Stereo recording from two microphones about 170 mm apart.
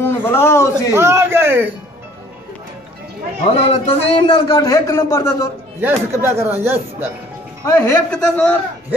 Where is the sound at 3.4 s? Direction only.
35° left (ahead or behind); by 5.5 s 15° left (ahead or behind).